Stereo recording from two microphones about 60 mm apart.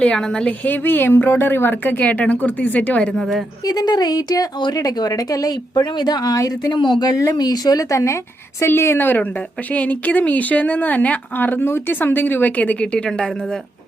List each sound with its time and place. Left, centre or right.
0.0 s a woman's voice: centre
0.6 s a woman's voice: left
3.1 s a woman's voice: centre
3.7 s speech: left
6.2 s speech: left
7.0 s speech: left
8.6 s a woman's voice: left